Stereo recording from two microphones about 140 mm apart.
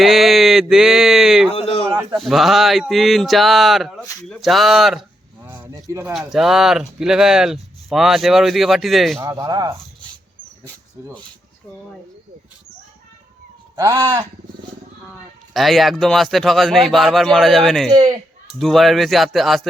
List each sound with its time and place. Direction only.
0.0 s speech: centre (ahead or behind)
1.5 s a sound: 45° left (ahead or behind)
2.1 s speech: centre (ahead or behind)
5.5 s speech: 15° right (ahead or behind)
6.1 s speech: centre (ahead or behind)
9.2 s speech: 25° right (ahead or behind)
13.7 s speech: 25° right (ahead or behind)
15.5 s speech: centre (ahead or behind)